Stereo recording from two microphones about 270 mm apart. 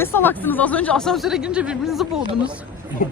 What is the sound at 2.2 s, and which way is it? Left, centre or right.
Speech, centre.